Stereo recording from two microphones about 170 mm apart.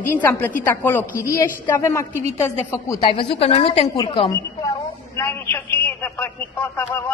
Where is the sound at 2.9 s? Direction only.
30° left (ahead or behind).